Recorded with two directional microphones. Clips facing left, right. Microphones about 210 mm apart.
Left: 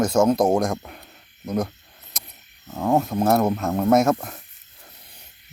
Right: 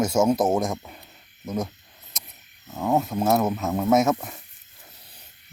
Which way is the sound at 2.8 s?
Centre (ahead or behind).